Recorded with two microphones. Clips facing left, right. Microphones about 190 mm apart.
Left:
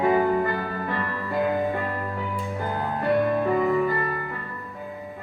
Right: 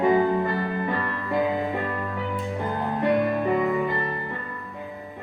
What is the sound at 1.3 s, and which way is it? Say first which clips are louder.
Music: even; centre (ahead or behind).